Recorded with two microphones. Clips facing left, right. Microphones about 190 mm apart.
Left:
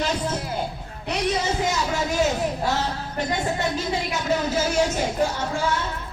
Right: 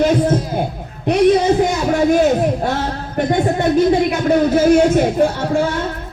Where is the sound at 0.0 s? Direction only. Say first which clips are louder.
Right 11 dB; 55° right (ahead or behind).